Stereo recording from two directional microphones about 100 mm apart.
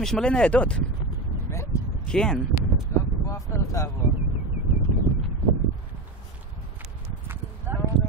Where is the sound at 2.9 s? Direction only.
25° left (ahead or behind).